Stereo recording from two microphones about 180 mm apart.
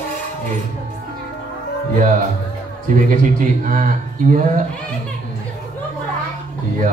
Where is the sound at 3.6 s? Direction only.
45° right (ahead or behind).